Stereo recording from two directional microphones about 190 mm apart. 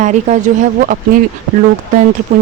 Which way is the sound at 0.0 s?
40° right (ahead or behind).